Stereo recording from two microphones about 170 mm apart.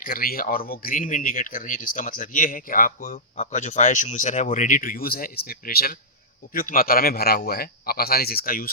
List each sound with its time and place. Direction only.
0.0 s speech: 55° left (ahead or behind)
3.3 s a man's voice: 45° left (ahead or behind)